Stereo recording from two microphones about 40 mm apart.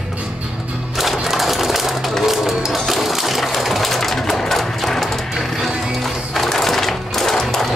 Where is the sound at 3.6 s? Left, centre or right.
Centre.